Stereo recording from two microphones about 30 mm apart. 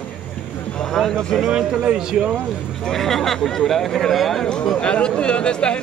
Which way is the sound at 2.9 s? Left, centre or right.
Centre.